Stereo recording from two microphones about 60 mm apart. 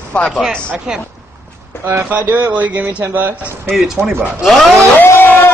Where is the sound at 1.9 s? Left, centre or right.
Right.